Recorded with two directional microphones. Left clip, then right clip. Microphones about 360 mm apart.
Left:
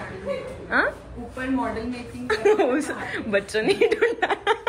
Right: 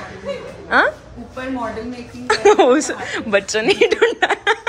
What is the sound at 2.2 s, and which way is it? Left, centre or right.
A woman's voice, centre.